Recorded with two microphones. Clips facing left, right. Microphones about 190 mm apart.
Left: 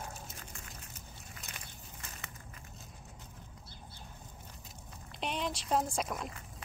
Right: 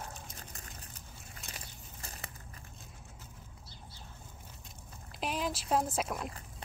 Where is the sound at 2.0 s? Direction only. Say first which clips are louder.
Right 3 dB; 35° right (ahead or behind).